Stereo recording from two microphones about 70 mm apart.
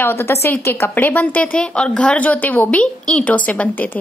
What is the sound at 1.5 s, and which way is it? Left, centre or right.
A woman's voice, centre.